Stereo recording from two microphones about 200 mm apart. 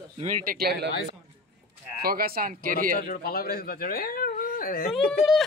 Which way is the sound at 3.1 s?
50° left (ahead or behind).